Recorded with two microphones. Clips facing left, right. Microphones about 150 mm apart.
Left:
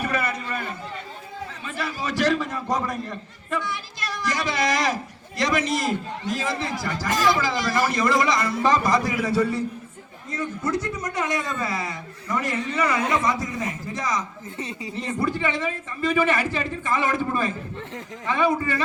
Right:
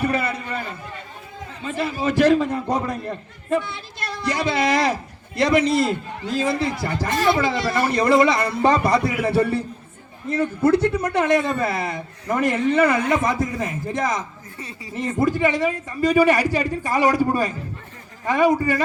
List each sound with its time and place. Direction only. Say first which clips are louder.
0.2 s a sound: right 2 dB; 30° right (ahead or behind)
1.8 s a man's voice: right 6 dB; 55° right (ahead or behind)
2.7 s a man's voice: right 2 dB; 30° right (ahead or behind)
4.0 s a man's voice: right 4 dB; 60° right (ahead or behind)
6.3 s a man's voice: right 7 dB; 25° right (ahead or behind)
7.3 s a man's voice: right 3 dB; 65° right (ahead or behind)
14.6 s speech: left 4 dB; 20° left (ahead or behind)
14.9 s speech: right 5 dB; 45° right (ahead or behind)